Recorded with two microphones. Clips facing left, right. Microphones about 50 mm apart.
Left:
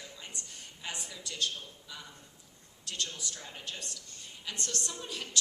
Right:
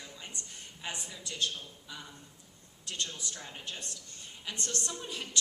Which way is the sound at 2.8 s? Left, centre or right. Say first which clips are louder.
Even; right.